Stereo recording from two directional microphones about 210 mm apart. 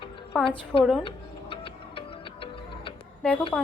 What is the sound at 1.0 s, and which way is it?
Music, 25° left (ahead or behind).